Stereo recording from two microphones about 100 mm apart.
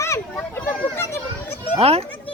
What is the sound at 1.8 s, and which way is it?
Speech, 80° right.